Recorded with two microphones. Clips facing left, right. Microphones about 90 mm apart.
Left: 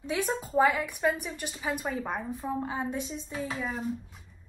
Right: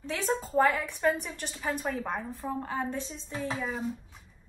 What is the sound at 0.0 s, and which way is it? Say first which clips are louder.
A woman's voice: even; 15° left (ahead or behind).